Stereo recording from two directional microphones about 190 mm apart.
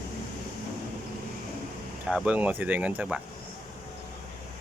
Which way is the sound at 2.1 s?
5° right (ahead or behind).